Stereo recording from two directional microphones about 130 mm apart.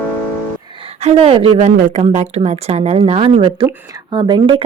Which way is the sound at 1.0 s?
50° right (ahead or behind).